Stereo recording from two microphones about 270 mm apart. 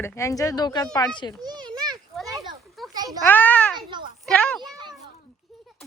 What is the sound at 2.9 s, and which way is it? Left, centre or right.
Speech, centre.